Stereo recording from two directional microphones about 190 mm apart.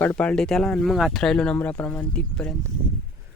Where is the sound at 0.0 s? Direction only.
10° left (ahead or behind).